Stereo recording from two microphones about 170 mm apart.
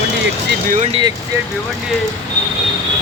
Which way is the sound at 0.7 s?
40° right (ahead or behind).